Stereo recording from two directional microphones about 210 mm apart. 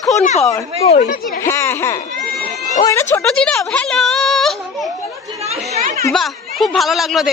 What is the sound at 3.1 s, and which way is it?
Speech, 10° left (ahead or behind).